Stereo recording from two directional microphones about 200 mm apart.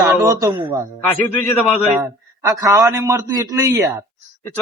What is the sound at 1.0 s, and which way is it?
Speech, 10° left (ahead or behind).